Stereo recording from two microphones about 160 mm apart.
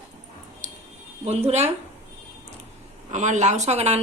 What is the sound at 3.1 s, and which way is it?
Speech, 45° right (ahead or behind).